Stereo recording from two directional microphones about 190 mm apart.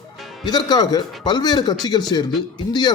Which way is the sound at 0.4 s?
20° left (ahead or behind).